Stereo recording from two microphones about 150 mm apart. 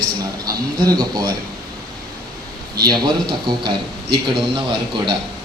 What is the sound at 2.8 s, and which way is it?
A man's voice, 30° right (ahead or behind).